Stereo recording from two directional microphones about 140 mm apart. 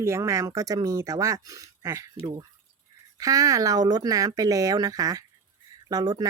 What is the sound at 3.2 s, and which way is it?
Speech, 25° right (ahead or behind).